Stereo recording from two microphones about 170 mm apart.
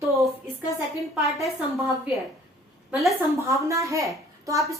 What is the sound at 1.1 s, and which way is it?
A woman's voice, centre (ahead or behind).